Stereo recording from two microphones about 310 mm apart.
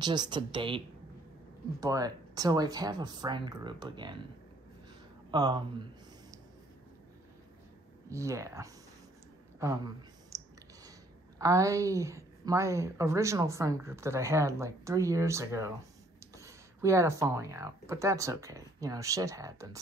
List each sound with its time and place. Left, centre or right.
0.0 s a woman's voice: centre
5.3 s speech: centre
8.1 s a woman's voice: centre
10.3 s clicking: centre
11.3 s a woman's voice: centre